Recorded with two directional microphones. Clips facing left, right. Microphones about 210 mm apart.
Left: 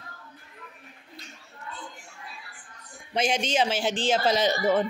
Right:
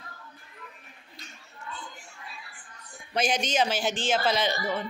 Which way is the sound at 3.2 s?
25° left (ahead or behind).